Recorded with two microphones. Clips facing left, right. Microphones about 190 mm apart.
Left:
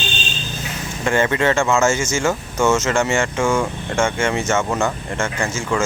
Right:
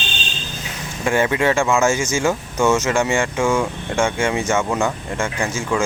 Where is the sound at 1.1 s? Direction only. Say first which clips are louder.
Even; 10° right (ahead or behind).